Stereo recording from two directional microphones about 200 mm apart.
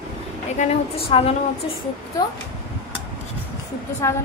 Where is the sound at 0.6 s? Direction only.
30° left (ahead or behind).